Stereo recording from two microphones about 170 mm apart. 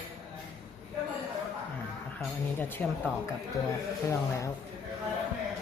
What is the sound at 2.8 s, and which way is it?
Speech, 10° left (ahead or behind).